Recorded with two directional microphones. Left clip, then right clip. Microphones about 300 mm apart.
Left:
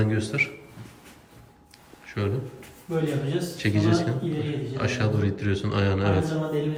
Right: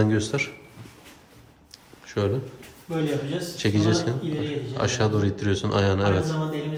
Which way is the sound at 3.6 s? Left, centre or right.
Centre.